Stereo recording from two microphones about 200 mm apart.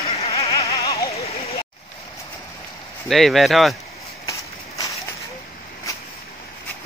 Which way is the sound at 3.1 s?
Centre (ahead or behind).